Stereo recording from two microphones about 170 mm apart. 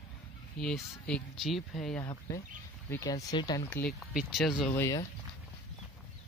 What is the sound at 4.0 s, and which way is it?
Speech, centre (ahead or behind).